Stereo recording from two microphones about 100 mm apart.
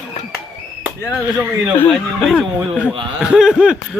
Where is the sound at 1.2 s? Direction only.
25° right (ahead or behind).